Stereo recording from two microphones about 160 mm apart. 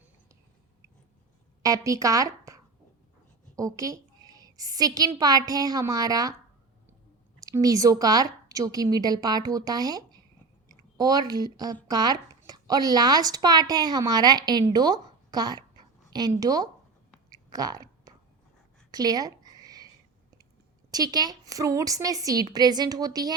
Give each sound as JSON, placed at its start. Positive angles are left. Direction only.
{"t": 1.6, "sound": "speech", "side_deg": -20}
{"t": 3.5, "sound": "a sound", "side_deg": -20}
{"t": 5.2, "sound": "a woman's voice", "side_deg": -25}
{"t": 7.3, "sound": "a woman's voice", "side_deg": -20}
{"t": 17.3, "sound": "chewing", "side_deg": -25}
{"t": 18.9, "sound": "a sound", "side_deg": -25}
{"t": 20.9, "sound": "a woman's voice", "side_deg": -25}